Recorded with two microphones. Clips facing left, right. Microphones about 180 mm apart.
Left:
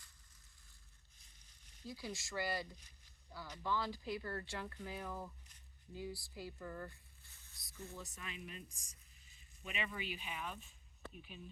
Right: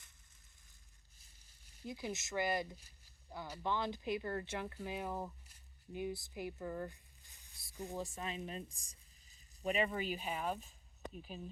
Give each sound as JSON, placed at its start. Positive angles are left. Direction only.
{"t": 1.5, "sound": "sizzle", "side_deg": -10}
{"t": 1.9, "sound": "speech", "side_deg": -20}
{"t": 7.9, "sound": "speech", "side_deg": -30}